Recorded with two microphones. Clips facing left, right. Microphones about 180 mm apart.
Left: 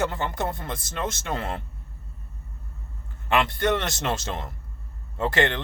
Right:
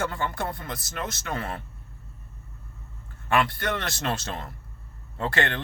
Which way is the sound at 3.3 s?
20° left (ahead or behind).